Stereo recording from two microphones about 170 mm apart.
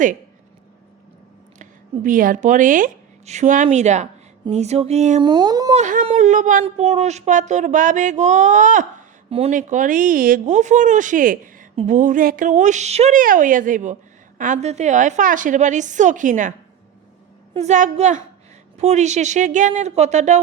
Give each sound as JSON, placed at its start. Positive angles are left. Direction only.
{"t": 2.0, "sound": "speech", "side_deg": -50}
{"t": 4.4, "sound": "a sound", "side_deg": -40}
{"t": 5.2, "sound": "speech", "side_deg": -25}
{"t": 5.7, "sound": "humming", "side_deg": -50}
{"t": 6.1, "sound": "speech", "side_deg": -45}